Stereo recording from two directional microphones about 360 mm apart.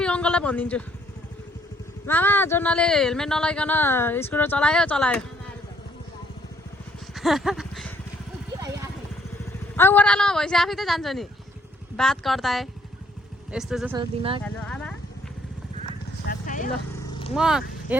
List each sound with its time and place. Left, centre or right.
0.0 s speech: centre
2.0 s speech: centre
7.1 s a sound: centre
8.5 s vehicle: centre
9.7 s speech: centre
14.4 s speech: centre
16.2 s vehicle: left
17.3 s speech: centre